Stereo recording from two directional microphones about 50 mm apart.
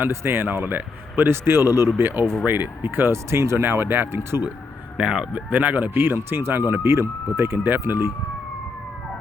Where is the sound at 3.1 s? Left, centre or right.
Right.